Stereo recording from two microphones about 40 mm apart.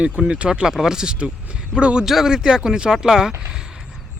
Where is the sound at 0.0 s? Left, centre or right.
Right.